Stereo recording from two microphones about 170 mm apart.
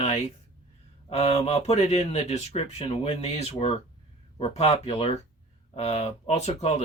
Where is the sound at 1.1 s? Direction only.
40° left (ahead or behind).